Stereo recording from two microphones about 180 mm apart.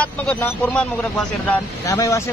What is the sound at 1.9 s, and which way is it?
Speech, 15° left (ahead or behind).